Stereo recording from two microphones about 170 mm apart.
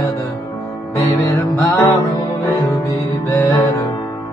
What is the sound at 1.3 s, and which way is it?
Music, 20° left (ahead or behind).